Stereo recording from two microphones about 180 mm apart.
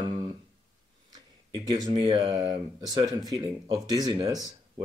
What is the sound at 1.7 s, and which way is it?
Speech, 25° right (ahead or behind).